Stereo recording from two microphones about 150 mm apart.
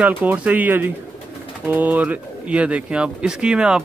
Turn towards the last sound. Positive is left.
turn(degrees=-5)  # may be behind; listen again after turning